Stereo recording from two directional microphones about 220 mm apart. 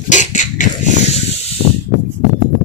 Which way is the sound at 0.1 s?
35° left (ahead or behind).